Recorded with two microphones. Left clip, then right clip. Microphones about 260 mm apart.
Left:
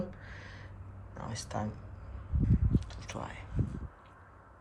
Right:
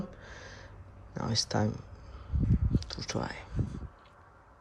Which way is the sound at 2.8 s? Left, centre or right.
Right.